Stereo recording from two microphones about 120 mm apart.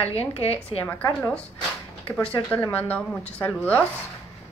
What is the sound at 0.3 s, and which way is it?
Speech, 55° left (ahead or behind).